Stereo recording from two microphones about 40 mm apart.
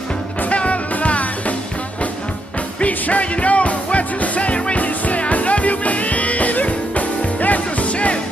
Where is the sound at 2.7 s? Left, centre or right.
Left.